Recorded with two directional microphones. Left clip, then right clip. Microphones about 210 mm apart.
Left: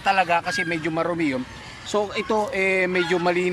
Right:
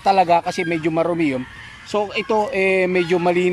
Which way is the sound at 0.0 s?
20° right (ahead or behind).